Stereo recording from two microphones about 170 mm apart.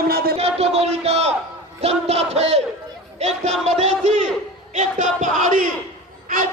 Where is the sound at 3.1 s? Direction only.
40° right (ahead or behind).